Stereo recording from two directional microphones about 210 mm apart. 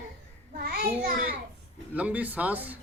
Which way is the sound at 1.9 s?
5° right (ahead or behind).